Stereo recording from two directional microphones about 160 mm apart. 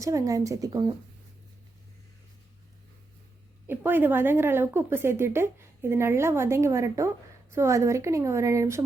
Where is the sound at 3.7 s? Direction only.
10° right (ahead or behind).